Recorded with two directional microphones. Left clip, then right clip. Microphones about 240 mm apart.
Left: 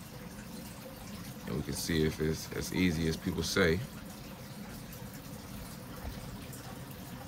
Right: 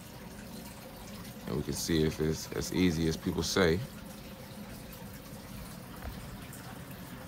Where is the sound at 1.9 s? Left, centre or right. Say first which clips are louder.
Right 1 dB; centre.